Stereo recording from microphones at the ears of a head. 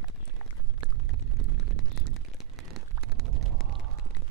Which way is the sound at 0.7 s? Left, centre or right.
Right.